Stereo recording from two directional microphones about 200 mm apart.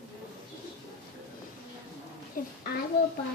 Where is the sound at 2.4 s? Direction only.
45° left (ahead or behind).